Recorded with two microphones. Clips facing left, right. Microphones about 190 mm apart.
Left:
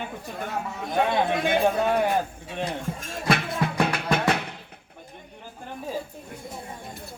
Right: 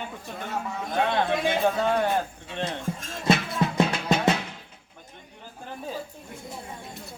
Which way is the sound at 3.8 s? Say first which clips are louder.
Even; 60° left (ahead or behind).